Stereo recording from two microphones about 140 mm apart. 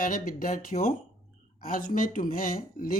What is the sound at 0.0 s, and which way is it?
Speech, 75° left (ahead or behind).